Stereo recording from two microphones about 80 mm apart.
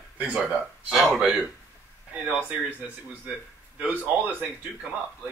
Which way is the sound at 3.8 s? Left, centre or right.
Centre.